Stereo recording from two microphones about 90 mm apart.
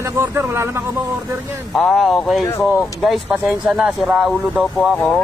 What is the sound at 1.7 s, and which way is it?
Speech, centre (ahead or behind).